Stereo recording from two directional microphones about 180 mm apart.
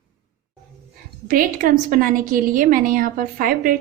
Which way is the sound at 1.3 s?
50° right (ahead or behind).